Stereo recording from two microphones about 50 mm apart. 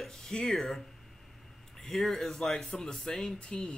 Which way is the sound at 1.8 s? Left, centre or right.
Centre.